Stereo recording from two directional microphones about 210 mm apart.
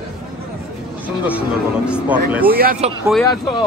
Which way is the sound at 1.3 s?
5° right (ahead or behind).